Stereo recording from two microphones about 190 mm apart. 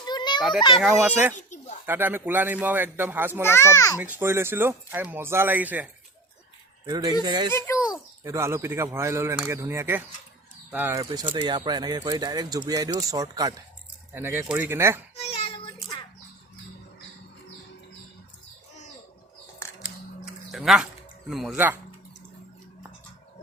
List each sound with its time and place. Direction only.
0.0 s children playing: 20° left (ahead or behind)
0.8 s speech: 5° right (ahead or behind)
1.4 s a sound: 40° left (ahead or behind)
1.9 s speech: 10° right (ahead or behind)
3.4 s a child's voice: 15° left (ahead or behind)
3.9 s speech: 10° right (ahead or behind)
6.8 s speech: 20° right (ahead or behind)
15.2 s child singing: 30° left (ahead or behind)
20.2 s a sound: centre (ahead or behind)
21.2 s speech: centre (ahead or behind)